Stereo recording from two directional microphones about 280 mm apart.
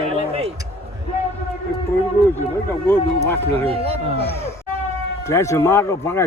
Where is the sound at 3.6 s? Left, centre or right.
Right.